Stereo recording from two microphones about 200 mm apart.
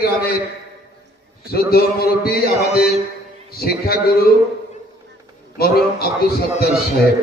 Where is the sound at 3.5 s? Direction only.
50° left (ahead or behind).